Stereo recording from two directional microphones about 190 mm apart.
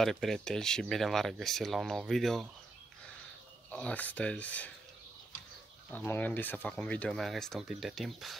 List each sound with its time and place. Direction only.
0.0 s speech: centre (ahead or behind)
3.7 s speech: 5° left (ahead or behind)
5.9 s speech: 10° left (ahead or behind)